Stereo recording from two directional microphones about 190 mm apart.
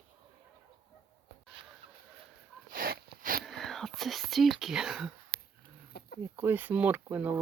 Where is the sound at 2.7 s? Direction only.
50° right (ahead or behind).